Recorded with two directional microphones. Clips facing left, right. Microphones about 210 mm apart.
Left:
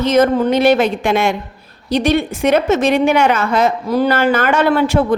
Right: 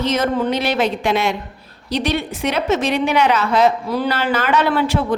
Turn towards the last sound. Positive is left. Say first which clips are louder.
# left 4 dB
turn(degrees=50)  # may be behind; listen again after turning